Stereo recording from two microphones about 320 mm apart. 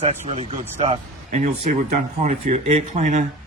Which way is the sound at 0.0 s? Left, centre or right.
Centre.